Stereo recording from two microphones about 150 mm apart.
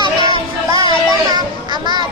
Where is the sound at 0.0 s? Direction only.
30° right (ahead or behind).